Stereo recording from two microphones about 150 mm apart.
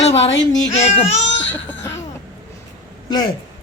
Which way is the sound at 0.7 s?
45° left (ahead or behind).